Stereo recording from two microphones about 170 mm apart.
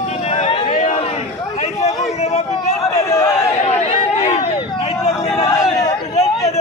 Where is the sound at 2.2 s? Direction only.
40° left (ahead or behind).